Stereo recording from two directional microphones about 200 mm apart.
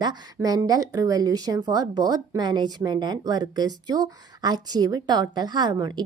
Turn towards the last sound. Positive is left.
turn(degrees=-20)  # may be behind; listen again after turning